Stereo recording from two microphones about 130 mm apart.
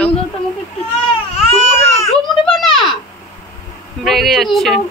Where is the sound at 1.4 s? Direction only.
60° left (ahead or behind).